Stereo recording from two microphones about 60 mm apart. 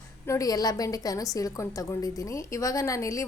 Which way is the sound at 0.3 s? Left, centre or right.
Left.